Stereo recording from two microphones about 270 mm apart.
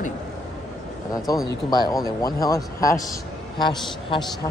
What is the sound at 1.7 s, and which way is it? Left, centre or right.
A man's voice, centre.